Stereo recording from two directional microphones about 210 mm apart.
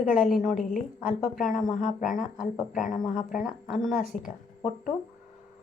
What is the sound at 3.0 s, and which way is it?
Speech, centre (ahead or behind).